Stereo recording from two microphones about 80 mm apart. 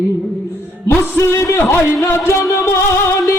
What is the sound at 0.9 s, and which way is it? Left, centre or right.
A man's voice, left.